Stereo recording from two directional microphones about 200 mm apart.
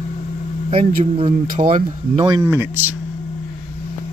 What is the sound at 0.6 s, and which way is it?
Speech, 25° right (ahead or behind).